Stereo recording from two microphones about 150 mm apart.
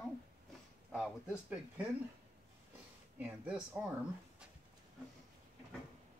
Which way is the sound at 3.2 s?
10° right (ahead or behind).